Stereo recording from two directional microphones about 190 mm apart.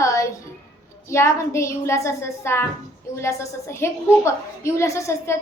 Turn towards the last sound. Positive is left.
turn(degrees=15)  # may be behind; listen again after turning